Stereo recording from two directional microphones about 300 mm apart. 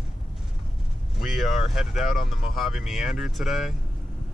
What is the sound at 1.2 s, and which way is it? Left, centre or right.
Speech, centre.